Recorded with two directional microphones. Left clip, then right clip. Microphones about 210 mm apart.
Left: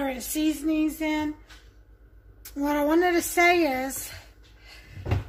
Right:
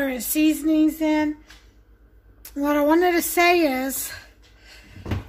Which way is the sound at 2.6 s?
45° right (ahead or behind).